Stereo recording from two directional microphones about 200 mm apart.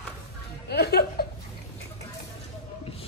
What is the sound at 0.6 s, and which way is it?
Speech, 55° left (ahead or behind).